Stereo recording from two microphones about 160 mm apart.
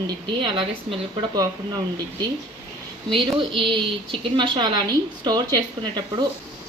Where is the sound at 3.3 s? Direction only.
30° right (ahead or behind).